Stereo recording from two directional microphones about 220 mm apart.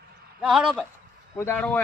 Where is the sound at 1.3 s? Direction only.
10° left (ahead or behind).